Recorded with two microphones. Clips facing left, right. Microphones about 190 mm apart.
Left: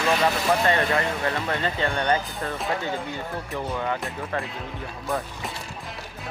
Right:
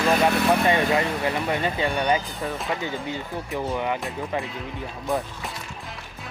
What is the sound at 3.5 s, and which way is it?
Speech, 15° right (ahead or behind).